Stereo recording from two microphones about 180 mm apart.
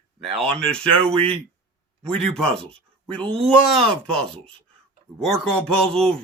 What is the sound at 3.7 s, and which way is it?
Speech, 5° left (ahead or behind).